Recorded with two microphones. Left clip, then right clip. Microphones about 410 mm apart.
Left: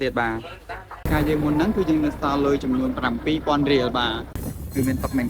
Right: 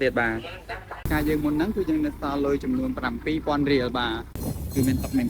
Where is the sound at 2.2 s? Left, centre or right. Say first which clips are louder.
Left 5 dB; left.